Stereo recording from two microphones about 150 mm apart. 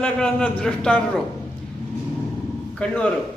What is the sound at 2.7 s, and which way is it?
Speech, 5° left (ahead or behind).